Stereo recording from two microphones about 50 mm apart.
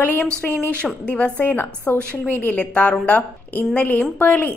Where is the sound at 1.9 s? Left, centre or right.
Left.